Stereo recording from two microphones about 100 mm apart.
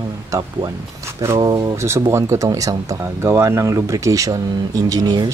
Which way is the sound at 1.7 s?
25° right (ahead or behind).